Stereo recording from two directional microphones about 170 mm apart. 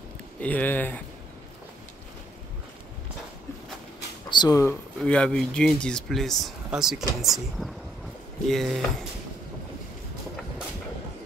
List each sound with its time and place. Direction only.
0.4 s speech: 10° left (ahead or behind)
4.3 s speech: 25° left (ahead or behind)
5.0 s speech: 5° left (ahead or behind)